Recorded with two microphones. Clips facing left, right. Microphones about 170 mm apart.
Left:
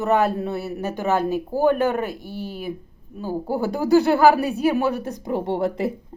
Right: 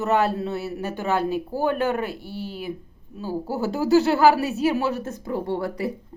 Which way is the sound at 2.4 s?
45° left (ahead or behind).